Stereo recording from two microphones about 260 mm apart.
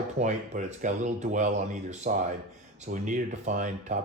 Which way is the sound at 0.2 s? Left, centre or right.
Right.